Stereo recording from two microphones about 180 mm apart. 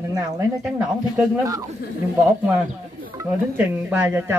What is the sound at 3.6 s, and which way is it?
Speech, 10° right (ahead or behind).